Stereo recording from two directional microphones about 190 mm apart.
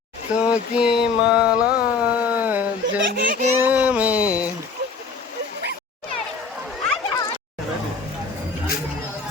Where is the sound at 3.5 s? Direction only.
10° right (ahead or behind).